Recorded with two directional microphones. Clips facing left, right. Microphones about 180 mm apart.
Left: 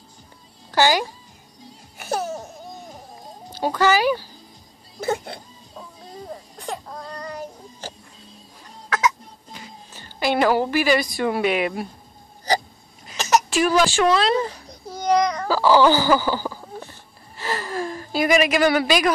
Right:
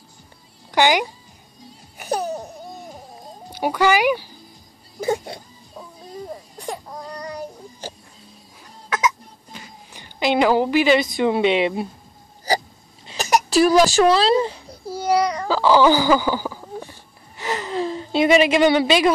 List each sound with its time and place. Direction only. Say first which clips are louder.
0.7 s speech: right 1 dB; 15° right (ahead or behind)
2.0 s laughter: right 2 dB; 15° right (ahead or behind)
3.4 s speech: right 1 dB; 15° right (ahead or behind)
5.0 s a sound: right 2 dB; 10° right (ahead or behind)
6.6 s baby cry: right 1 dB; 10° right (ahead or behind)
9.9 s a woman's voice: right 2 dB; 15° right (ahead or behind)
13.5 s speech: right 4 dB; 40° right (ahead or behind)
14.5 s a sound: right 5 dB; 10° right (ahead or behind)
17.4 s gasp: right 2 dB; 20° right (ahead or behind)